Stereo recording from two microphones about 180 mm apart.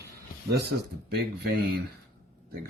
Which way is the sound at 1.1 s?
60° right (ahead or behind).